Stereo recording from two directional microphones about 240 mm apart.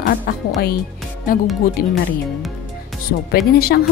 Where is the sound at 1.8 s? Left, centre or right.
Left.